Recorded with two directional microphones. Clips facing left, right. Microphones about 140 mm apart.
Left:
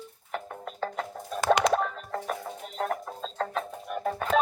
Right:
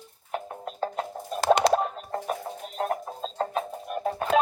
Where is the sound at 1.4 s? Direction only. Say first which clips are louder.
Right 2 dB; 35° right (ahead or behind).